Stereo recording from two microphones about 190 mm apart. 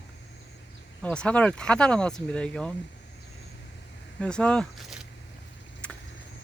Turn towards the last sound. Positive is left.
turn(degrees=0)  # may be behind; listen again after turning